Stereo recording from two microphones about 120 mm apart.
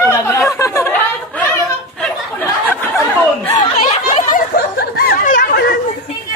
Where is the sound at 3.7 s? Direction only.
75° left (ahead or behind).